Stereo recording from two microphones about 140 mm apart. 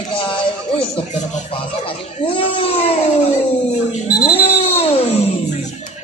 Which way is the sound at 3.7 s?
55° left (ahead or behind).